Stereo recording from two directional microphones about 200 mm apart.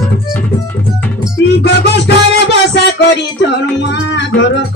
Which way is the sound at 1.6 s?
55° left (ahead or behind).